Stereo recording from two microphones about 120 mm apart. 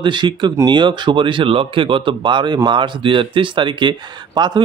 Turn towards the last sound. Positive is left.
turn(degrees=-35)  # may be behind; listen again after turning